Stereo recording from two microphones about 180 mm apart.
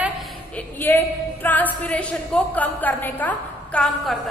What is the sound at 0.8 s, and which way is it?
A woman's voice, 10° left (ahead or behind).